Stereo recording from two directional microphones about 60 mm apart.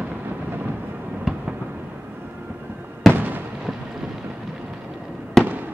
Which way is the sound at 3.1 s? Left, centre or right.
Right.